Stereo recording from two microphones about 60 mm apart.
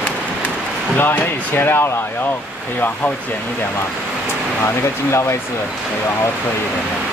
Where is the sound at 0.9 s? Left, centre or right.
Left.